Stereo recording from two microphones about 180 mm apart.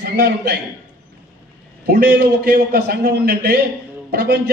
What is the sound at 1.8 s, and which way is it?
A man's voice, 65° right (ahead or behind).